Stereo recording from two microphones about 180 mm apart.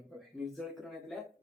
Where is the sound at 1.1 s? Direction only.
Centre (ahead or behind).